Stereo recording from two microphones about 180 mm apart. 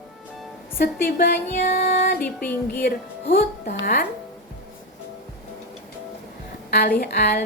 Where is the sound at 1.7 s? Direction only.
45° left (ahead or behind).